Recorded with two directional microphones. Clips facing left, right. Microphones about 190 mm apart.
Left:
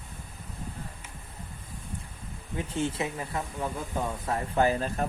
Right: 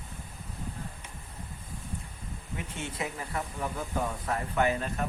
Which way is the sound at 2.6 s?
30° left (ahead or behind).